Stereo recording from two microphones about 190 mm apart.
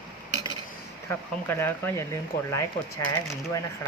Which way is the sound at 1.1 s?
10° left (ahead or behind).